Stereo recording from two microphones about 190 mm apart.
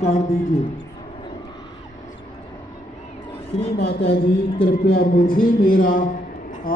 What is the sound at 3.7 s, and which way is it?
A man's voice, 60° left (ahead or behind).